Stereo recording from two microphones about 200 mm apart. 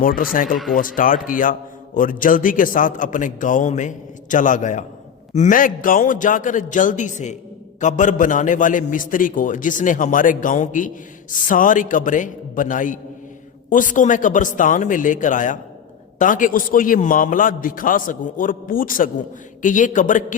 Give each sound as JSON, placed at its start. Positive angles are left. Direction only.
{"t": 0.0, "sound": "a man's voice", "side_deg": 45}